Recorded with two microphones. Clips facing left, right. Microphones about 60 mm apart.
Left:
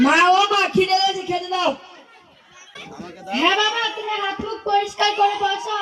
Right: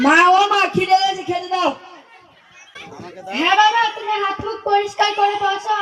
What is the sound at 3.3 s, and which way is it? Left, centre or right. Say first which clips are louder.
Speech: left 1 dB; centre.